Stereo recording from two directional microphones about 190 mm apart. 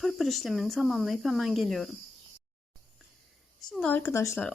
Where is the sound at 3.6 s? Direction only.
5° left (ahead or behind).